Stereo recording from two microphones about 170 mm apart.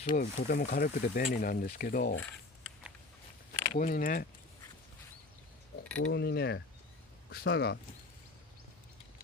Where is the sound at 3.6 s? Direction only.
55° left (ahead or behind).